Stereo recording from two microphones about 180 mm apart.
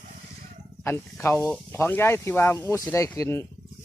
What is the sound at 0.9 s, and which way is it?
Speech, 10° left (ahead or behind).